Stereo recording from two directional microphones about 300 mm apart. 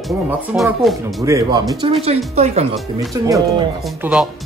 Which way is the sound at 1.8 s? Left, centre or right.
Centre.